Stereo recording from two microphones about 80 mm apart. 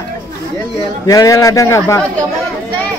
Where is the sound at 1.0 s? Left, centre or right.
Left.